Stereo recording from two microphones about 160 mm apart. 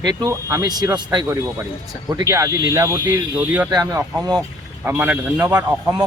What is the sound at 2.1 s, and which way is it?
Speech, 20° right (ahead or behind).